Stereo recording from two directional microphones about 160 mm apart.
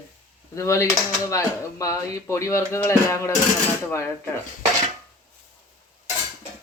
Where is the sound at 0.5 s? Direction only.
20° left (ahead or behind).